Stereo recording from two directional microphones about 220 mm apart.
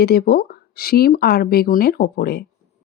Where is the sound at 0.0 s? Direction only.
45° left (ahead or behind).